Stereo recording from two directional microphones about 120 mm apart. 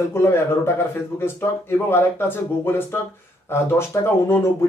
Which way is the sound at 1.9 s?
20° left (ahead or behind).